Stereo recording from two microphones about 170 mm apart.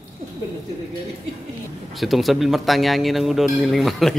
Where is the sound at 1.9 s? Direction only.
Centre (ahead or behind).